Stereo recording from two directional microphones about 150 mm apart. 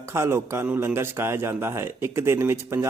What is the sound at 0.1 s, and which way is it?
A man's voice, 15° right (ahead or behind).